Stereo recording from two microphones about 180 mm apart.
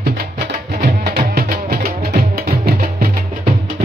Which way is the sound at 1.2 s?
55° right (ahead or behind).